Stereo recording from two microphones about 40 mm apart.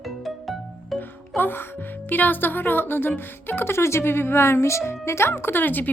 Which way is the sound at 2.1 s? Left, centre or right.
Left.